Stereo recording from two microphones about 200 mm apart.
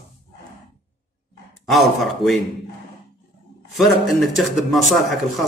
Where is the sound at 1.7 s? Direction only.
Centre (ahead or behind).